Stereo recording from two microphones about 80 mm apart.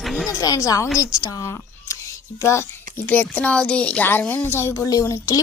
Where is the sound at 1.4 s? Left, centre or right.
Left.